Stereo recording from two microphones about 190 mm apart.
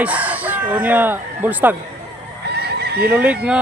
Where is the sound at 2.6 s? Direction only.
55° right (ahead or behind).